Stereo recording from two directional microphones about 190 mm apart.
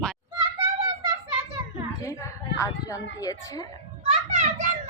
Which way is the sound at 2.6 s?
15° left (ahead or behind).